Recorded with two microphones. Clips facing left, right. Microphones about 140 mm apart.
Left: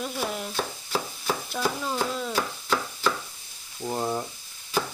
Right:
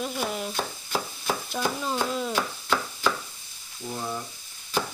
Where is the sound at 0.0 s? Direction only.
Centre (ahead or behind).